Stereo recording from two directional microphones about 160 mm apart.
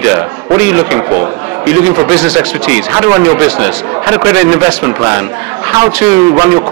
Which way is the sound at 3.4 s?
15° right (ahead or behind).